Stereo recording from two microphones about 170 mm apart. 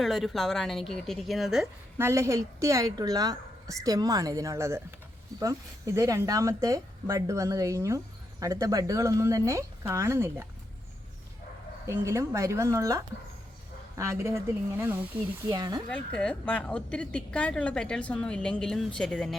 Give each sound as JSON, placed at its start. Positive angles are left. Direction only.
{"t": 0.0, "sound": "a woman's voice", "side_deg": 0}
{"t": 2.0, "sound": "speech", "side_deg": -15}
{"t": 11.9, "sound": "speech", "side_deg": -15}
{"t": 15.4, "sound": "speech", "side_deg": -25}
{"t": 15.9, "sound": "a woman's voice", "side_deg": 5}